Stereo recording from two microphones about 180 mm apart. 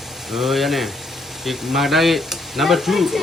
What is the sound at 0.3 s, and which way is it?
Speech, centre (ahead or behind).